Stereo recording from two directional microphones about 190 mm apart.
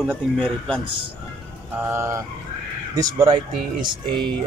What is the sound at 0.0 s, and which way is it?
Speech, centre (ahead or behind).